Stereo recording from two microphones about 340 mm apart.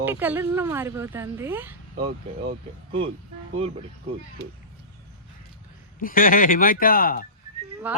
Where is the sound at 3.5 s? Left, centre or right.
Centre.